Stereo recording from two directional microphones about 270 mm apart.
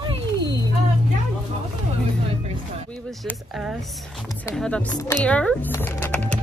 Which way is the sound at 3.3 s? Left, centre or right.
Centre.